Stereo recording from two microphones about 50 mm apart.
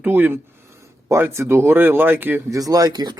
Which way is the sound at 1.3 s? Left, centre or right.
Right.